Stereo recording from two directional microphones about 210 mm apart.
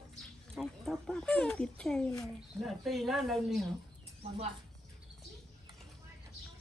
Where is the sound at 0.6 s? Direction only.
Centre (ahead or behind).